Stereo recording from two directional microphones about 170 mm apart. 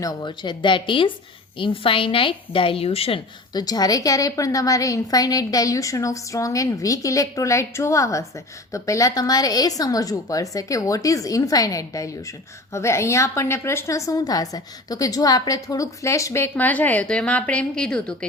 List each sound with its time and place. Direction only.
0.0 s a woman's voice: 20° left (ahead or behind)
3.5 s a woman's voice: 25° left (ahead or behind); by 18.3 s 5° left (ahead or behind)